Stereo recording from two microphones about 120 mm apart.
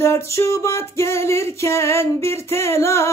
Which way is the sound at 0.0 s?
25° left (ahead or behind).